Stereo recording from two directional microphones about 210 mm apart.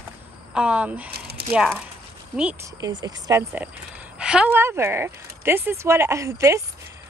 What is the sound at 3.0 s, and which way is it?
Speech, 15° right (ahead or behind).